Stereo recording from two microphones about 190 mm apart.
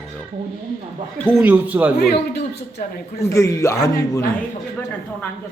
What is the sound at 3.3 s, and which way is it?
Speech, 15° left (ahead or behind).